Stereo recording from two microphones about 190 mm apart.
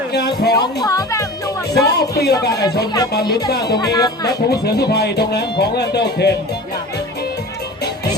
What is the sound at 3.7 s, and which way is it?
Speech, 20° left (ahead or behind).